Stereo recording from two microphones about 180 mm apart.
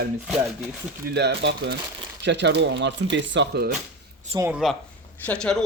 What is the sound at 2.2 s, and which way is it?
Speech, 75° right (ahead or behind).